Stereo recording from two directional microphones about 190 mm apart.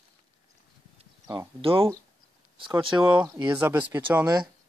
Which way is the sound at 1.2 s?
25° right (ahead or behind).